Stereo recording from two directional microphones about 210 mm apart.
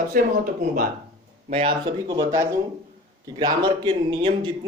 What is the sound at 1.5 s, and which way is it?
Speech, 25° right (ahead or behind).